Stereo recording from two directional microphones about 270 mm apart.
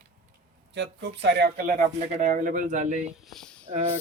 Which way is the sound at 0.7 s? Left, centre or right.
Right.